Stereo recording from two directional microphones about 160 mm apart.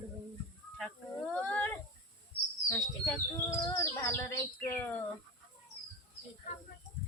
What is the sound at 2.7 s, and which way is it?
Speech, 20° left (ahead or behind).